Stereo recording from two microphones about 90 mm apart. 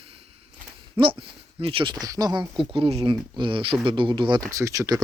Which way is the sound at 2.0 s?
45° right (ahead or behind).